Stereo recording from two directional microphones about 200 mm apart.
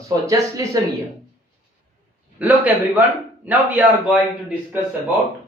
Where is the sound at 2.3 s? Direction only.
10° right (ahead or behind).